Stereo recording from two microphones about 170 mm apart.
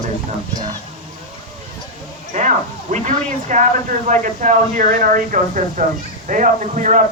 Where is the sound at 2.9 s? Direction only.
45° right (ahead or behind).